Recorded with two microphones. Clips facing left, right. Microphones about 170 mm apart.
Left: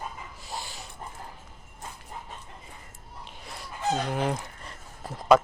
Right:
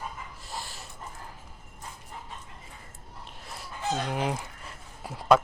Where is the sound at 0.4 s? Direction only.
Centre (ahead or behind).